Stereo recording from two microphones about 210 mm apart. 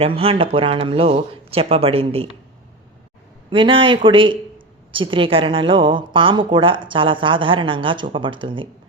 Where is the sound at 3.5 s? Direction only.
25° right (ahead or behind).